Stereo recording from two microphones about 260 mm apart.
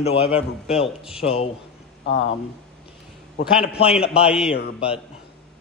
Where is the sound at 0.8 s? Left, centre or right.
Centre.